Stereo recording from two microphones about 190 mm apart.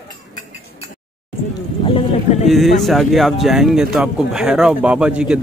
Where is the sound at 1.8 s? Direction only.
25° left (ahead or behind).